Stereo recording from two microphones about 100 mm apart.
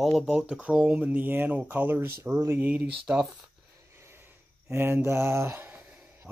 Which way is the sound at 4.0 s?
25° right (ahead or behind).